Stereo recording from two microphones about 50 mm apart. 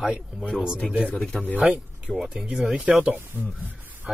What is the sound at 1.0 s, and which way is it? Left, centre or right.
Speech, centre.